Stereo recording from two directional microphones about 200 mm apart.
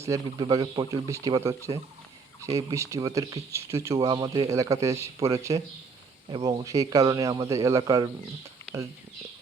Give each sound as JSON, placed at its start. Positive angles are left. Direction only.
{"t": 0.0, "sound": "a man's voice", "side_deg": -20}